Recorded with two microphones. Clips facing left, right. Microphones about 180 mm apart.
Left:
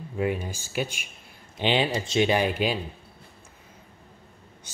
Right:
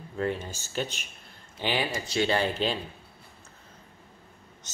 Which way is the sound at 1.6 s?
20° left (ahead or behind).